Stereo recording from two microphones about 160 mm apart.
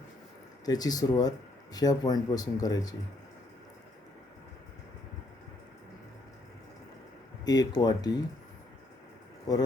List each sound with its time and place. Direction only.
0.6 s speech: 25° left (ahead or behind)
7.4 s speech: 25° left (ahead or behind)
9.5 s speech: 25° left (ahead or behind)